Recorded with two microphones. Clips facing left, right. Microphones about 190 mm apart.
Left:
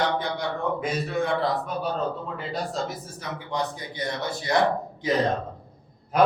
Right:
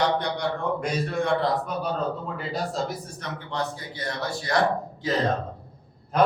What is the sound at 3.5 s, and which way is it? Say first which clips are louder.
Speech: left 1 dB; 20° left (ahead or behind).